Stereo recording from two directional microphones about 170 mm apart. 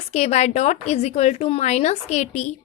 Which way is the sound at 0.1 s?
40° left (ahead or behind).